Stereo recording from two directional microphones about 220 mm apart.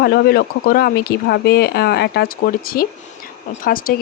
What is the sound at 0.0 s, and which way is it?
Speech, 45° left (ahead or behind).